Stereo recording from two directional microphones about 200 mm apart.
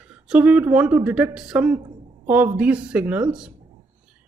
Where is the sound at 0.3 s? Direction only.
5° right (ahead or behind).